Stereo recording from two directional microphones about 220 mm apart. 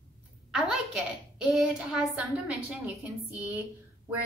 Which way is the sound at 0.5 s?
Centre (ahead or behind).